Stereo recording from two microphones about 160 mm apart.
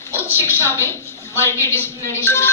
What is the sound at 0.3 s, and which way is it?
A woman's voice, 15° left (ahead or behind).